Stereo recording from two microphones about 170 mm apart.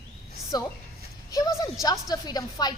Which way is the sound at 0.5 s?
25° left (ahead or behind).